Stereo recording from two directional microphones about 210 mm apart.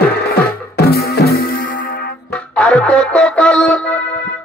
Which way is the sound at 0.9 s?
50° left (ahead or behind).